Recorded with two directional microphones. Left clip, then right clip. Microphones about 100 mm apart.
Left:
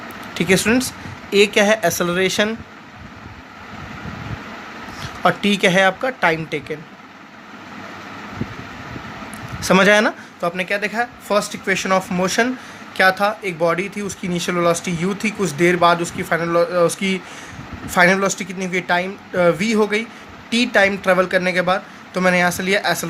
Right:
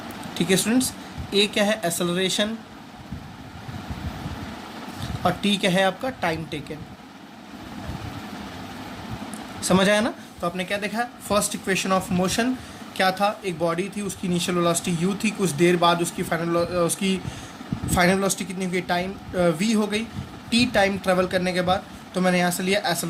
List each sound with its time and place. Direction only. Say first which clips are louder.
0.3 s speech: left 6 dB; 65° left (ahead or behind)
5.2 s speech: left 7 dB; 65° left (ahead or behind)
9.6 s speech: left 7 dB; 60° left (ahead or behind)
10.6 s speech: left 6 dB; 35° left (ahead or behind)